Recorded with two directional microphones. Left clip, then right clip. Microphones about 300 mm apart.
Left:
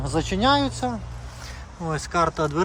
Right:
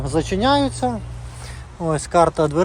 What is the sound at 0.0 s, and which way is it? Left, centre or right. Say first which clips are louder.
Speech: right 3 dB; centre.